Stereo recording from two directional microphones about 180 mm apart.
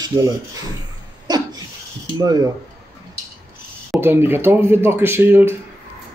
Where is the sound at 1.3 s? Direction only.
20° right (ahead or behind).